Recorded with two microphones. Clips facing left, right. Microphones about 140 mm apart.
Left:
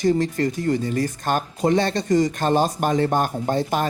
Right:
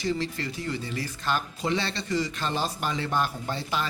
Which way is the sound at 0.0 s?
45° left (ahead or behind).